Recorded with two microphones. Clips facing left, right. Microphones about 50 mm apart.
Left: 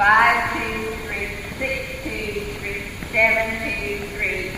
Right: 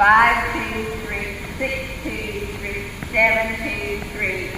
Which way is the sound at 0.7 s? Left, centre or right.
Centre.